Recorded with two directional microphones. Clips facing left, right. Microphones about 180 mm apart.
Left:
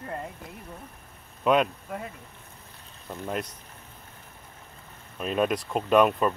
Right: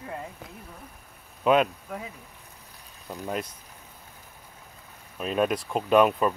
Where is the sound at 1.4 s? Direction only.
Centre (ahead or behind).